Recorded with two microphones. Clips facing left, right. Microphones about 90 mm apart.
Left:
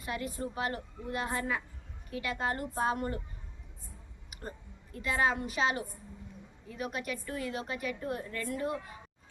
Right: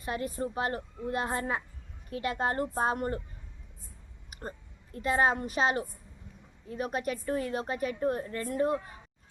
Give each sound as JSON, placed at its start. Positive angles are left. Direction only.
{"t": 0.0, "sound": "a woman's voice", "side_deg": -40}
{"t": 4.3, "sound": "a sound", "side_deg": -35}
{"t": 4.9, "sound": "a woman's voice", "side_deg": -40}